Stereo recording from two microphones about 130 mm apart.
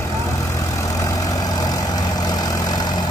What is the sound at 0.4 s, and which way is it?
Vehicle, 25° left (ahead or behind).